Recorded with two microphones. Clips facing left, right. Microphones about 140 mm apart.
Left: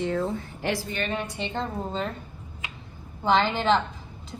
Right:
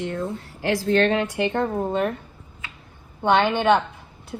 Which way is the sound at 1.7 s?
65° right (ahead or behind).